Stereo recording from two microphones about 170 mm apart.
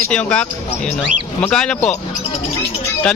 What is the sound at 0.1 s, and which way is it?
Speech, 5° left (ahead or behind).